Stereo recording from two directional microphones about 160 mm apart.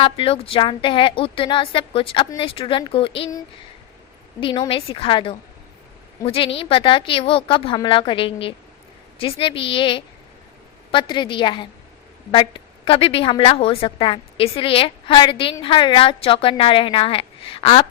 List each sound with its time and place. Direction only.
0.0 s a woman's voice: 35° left (ahead or behind)